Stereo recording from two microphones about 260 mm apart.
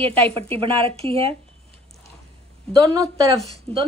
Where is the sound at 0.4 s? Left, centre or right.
Right.